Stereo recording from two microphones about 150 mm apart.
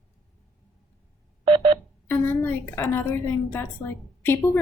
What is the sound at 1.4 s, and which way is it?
Telephone dialing, 35° right (ahead or behind).